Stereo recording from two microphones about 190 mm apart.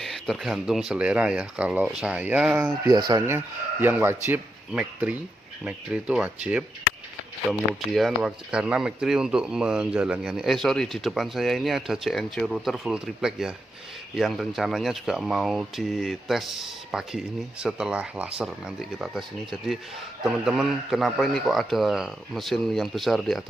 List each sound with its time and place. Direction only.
0.0 s speech: centre (ahead or behind)
3.1 s speech: 15° right (ahead or behind); by 23.4 s centre (ahead or behind)